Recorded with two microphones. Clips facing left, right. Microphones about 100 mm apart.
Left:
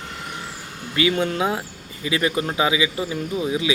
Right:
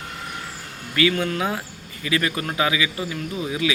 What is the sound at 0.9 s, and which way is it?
Speech, 25° left (ahead or behind).